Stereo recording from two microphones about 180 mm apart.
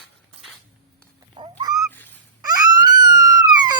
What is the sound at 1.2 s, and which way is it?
Cat, 25° right (ahead or behind).